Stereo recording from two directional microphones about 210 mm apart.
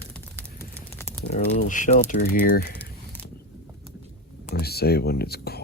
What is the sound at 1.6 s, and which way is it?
Speech, 35° left (ahead or behind).